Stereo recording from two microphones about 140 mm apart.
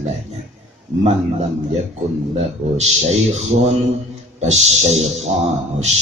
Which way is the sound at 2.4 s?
50° right (ahead or behind).